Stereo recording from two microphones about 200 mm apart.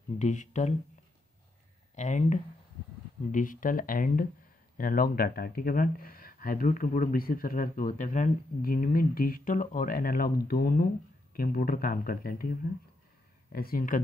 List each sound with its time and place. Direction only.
0.2 s speech: 40° left (ahead or behind)
2.0 s speech: 35° left (ahead or behind)